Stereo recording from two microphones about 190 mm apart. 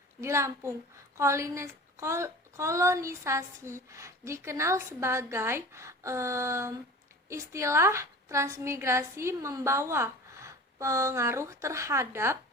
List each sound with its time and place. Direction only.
0.2 s speech: 15° right (ahead or behind)